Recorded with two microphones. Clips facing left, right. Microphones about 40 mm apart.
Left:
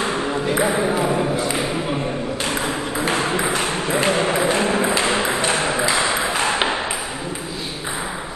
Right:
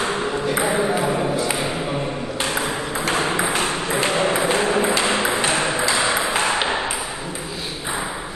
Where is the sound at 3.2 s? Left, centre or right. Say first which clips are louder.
Even; centre.